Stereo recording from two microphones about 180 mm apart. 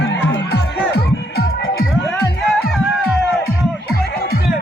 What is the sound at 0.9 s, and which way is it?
Music, 60° left (ahead or behind).